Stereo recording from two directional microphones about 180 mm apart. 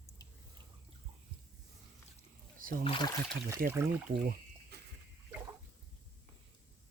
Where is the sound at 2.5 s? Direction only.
50° right (ahead or behind).